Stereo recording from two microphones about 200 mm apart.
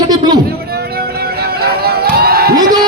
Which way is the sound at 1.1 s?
50° right (ahead or behind).